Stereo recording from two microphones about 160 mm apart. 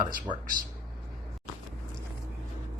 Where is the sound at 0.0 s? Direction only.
60° right (ahead or behind).